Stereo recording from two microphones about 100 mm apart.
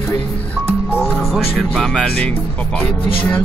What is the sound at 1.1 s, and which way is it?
Speech, centre (ahead or behind).